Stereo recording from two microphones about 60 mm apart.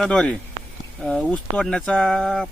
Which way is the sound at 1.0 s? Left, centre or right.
Centre.